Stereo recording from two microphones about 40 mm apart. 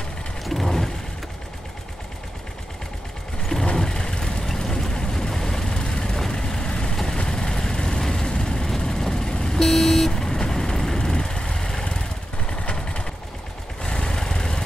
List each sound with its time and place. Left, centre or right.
0.4 s vehicle: centre
3.7 s vehicle: centre
9.6 s vehicle: centre